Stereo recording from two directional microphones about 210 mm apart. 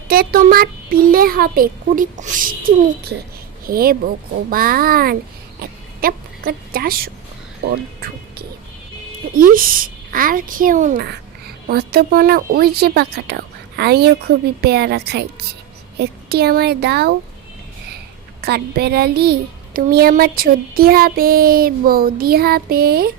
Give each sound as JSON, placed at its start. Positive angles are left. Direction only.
{"t": 0.1, "sound": "a woman's voice", "side_deg": -45}
{"t": 5.5, "sound": "a sound", "side_deg": -45}
{"t": 7.6, "sound": "a child's voice", "side_deg": -50}
{"t": 11.0, "sound": "a woman's voice", "side_deg": -50}
{"t": 18.4, "sound": "a woman's voice", "side_deg": -50}